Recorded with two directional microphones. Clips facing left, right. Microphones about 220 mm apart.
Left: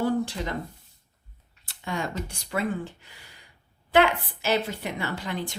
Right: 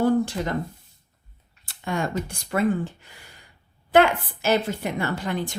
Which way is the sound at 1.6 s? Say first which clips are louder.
Right 4 dB; 50° right (ahead or behind).